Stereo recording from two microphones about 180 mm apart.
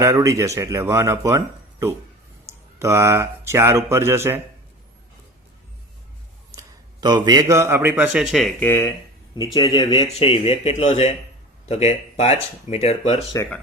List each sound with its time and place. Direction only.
0.0 s speech: 20° right (ahead or behind)
2.7 s speech: 15° right (ahead or behind)
6.6 s a man's voice: 20° right (ahead or behind); by 8.7 s centre (ahead or behind)
9.3 s speech: 25° left (ahead or behind)